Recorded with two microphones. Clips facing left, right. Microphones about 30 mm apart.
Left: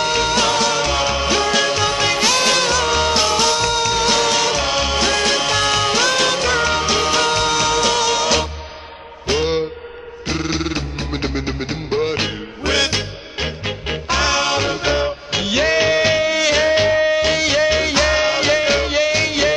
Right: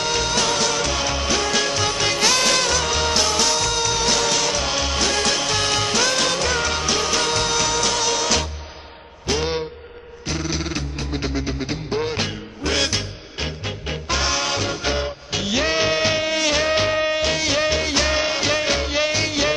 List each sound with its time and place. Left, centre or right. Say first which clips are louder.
0.0 s music: left 4 dB; centre
2.2 s music: left 1 dB; centre
10.2 s music: left 4 dB; left
16.0 s music: left 4 dB; centre
17.2 s music: left 4 dB; centre